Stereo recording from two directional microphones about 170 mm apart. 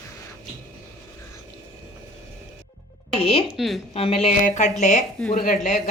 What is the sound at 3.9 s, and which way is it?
A woman's voice, 35° left (ahead or behind).